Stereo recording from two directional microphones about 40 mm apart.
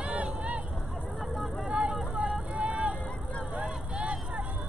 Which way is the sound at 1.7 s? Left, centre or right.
Right.